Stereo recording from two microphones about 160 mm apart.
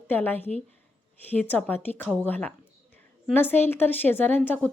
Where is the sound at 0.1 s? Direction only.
10° left (ahead or behind).